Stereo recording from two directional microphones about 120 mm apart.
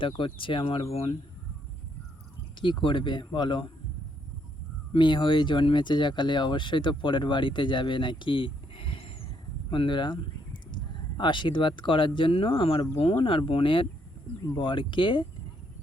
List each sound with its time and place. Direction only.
0.2 s speech: 45° left (ahead or behind)
2.6 s speech: 45° left (ahead or behind)
4.9 s speech: 40° left (ahead or behind)
9.6 s a sound: 40° left (ahead or behind)
11.2 s speech: 40° left (ahead or behind)